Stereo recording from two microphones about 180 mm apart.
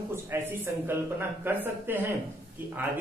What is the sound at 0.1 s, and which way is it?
A man's voice, 10° right (ahead or behind).